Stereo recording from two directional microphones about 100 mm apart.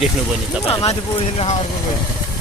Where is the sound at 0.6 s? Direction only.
75° left (ahead or behind).